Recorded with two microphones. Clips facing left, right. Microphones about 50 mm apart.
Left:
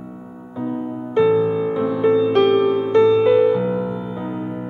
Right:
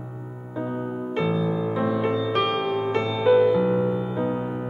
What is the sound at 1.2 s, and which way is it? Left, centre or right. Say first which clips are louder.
Music: left 9 dB; centre.